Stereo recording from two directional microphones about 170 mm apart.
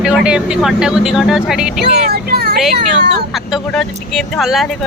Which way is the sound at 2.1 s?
70° right (ahead or behind).